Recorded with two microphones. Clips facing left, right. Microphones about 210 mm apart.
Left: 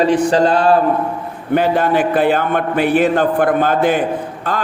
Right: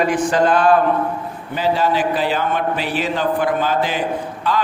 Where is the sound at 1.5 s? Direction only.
55° left (ahead or behind).